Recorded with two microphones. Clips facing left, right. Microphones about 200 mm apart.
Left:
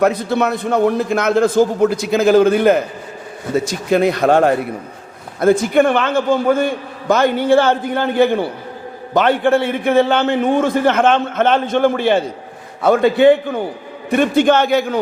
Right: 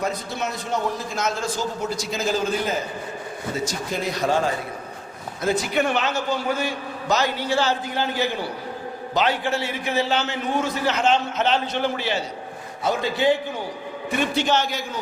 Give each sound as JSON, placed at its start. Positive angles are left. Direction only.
{"t": 0.0, "sound": "a man's voice", "side_deg": 60}